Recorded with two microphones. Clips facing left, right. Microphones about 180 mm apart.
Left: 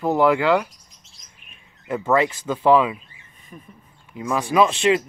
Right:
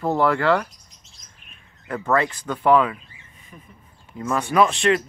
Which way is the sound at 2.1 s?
20° left (ahead or behind).